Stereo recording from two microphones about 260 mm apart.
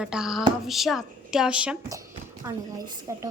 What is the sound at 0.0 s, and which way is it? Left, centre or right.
A woman's voice, centre.